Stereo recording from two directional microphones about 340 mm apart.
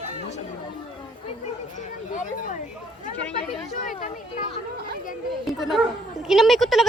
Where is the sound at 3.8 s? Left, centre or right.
Left.